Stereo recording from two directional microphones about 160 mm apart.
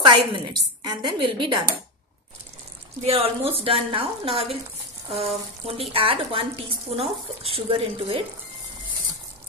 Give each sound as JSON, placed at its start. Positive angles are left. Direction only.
{"t": 0.0, "sound": "a woman's voice", "side_deg": -30}
{"t": 3.0, "sound": "speech", "side_deg": -40}